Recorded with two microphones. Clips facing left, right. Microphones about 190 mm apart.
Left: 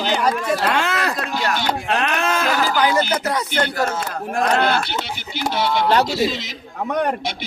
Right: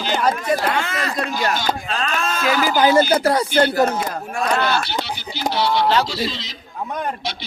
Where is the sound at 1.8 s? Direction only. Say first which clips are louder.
Left 3 dB; 65° left (ahead or behind).